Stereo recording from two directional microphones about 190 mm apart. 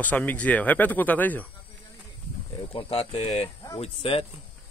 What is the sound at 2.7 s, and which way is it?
Speech, 30° left (ahead or behind).